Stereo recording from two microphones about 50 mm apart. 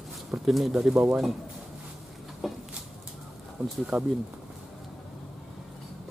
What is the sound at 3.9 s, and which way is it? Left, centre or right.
Speech, centre.